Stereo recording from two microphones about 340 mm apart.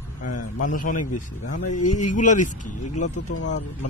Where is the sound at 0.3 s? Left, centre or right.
Left.